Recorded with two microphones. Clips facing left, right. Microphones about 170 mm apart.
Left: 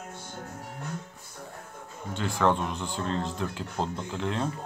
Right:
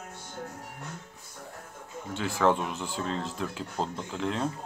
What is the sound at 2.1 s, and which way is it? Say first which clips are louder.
Speech: even; 5° right (ahead or behind).